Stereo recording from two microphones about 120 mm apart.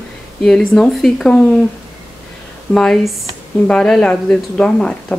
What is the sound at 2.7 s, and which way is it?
Speech, 5° left (ahead or behind).